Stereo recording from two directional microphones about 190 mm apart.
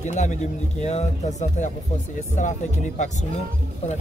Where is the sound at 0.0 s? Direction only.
35° left (ahead or behind).